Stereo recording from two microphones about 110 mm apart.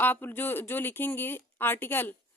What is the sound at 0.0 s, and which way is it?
Speech, 20° left (ahead or behind).